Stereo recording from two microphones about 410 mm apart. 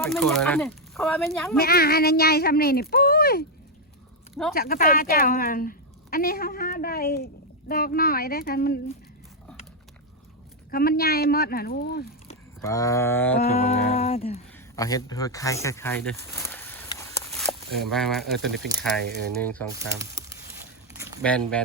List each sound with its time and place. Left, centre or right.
0.1 s speech: centre
1.5 s a woman's voice: left
2.9 s a sound: left
4.5 s a woman's voice: left
10.7 s a woman's voice: left
12.6 s humming: centre
14.8 s speech: centre
20.0 s a sound: centre